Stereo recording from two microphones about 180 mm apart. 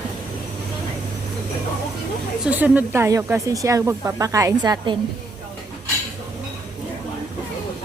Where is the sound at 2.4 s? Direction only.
10° right (ahead or behind).